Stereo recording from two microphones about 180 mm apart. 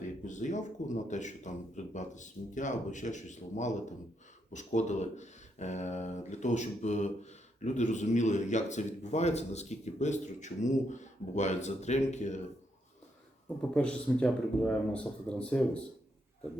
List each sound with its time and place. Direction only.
0.0 s speech: 45° left (ahead or behind)
13.7 s speech: 5° left (ahead or behind)